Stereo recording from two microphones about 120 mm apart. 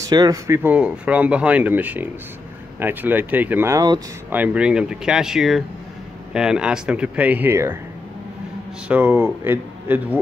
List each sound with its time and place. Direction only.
0.0 s speech: 30° right (ahead or behind)
0.5 s speech: 15° right (ahead or behind)
8.8 s speech: 15° right (ahead or behind)